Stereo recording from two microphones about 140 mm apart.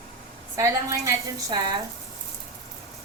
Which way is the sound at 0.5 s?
20° right (ahead or behind).